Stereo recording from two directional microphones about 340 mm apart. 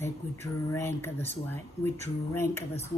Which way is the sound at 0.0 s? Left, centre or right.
Centre.